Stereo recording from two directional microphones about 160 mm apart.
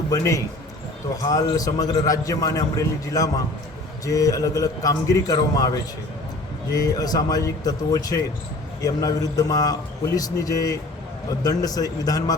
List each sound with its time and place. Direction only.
0.1 s a man's voice: 20° left (ahead or behind)